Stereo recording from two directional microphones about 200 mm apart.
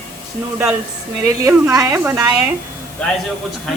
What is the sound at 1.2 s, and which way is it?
A woman's voice, 15° right (ahead or behind).